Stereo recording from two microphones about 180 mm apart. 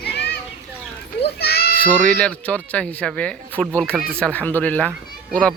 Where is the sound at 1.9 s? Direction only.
5° left (ahead or behind).